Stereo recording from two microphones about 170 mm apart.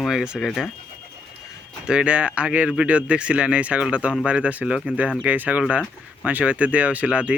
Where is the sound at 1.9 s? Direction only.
5° right (ahead or behind).